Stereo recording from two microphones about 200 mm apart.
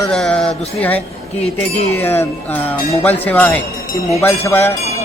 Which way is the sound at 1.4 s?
30° left (ahead or behind).